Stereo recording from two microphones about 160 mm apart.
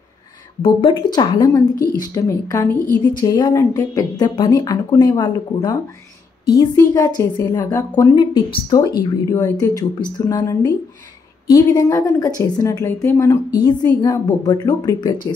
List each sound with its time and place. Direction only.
0.6 s a woman's voice: 30° left (ahead or behind)